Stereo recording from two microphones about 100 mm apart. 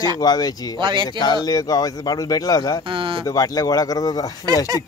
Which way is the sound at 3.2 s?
35° left (ahead or behind).